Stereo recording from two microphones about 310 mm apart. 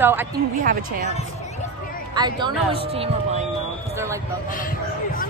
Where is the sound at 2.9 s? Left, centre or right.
Centre.